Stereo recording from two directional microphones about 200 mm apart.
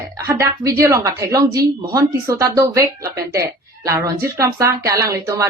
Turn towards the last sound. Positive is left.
turn(degrees=-15)  # may be behind; listen again after turning